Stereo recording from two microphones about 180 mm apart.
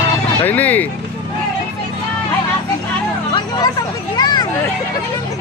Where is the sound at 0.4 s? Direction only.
10° left (ahead or behind).